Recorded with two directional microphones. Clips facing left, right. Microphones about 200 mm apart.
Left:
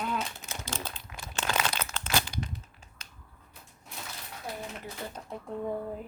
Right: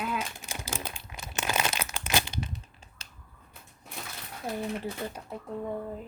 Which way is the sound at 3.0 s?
30° right (ahead or behind).